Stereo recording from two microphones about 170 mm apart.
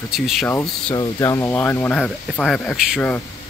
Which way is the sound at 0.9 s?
20° left (ahead or behind).